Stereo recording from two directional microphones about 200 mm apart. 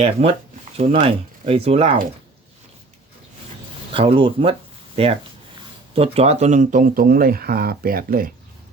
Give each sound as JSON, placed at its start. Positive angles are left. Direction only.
{"t": 0.0, "sound": "speech", "side_deg": -30}
{"t": 3.9, "sound": "speech", "side_deg": -25}